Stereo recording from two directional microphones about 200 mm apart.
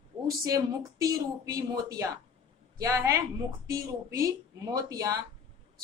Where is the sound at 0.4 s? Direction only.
15° right (ahead or behind).